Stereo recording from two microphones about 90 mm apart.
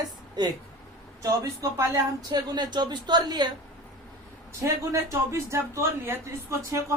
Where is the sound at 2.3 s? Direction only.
50° right (ahead or behind).